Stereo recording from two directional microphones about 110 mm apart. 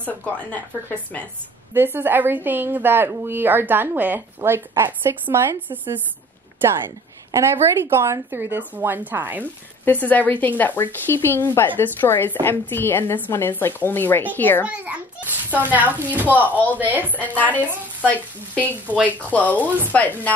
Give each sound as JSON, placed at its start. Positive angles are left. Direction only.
{"t": 0.0, "sound": "speech", "side_deg": 15}
{"t": 1.7, "sound": "a woman's voice", "side_deg": -20}
{"t": 7.3, "sound": "a woman's voice", "side_deg": -25}
{"t": 9.8, "sound": "speech", "side_deg": 15}
{"t": 14.7, "sound": "speech", "side_deg": -15}
{"t": 17.4, "sound": "speech", "side_deg": 15}